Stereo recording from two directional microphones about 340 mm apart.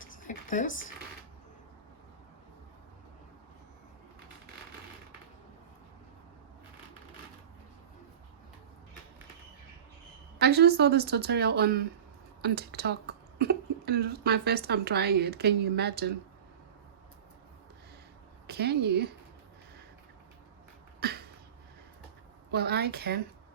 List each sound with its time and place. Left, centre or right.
0.3 s a sound: left
10.4 s a woman's voice: right
18.4 s a woman's voice: right
21.0 s cough: right
22.5 s a woman's voice: right